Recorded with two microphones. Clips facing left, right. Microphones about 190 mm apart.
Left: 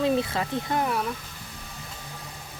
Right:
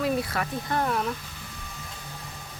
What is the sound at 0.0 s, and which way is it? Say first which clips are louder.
Speech: left 3 dB; 25° left (ahead or behind).